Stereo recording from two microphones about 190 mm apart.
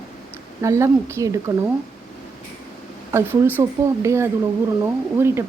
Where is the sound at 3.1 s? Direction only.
15° right (ahead or behind).